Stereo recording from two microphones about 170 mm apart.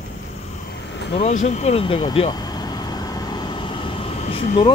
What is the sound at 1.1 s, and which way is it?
Speech, 40° left (ahead or behind).